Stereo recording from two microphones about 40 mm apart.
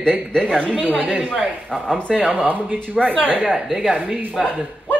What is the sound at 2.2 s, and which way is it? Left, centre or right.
Speech, right.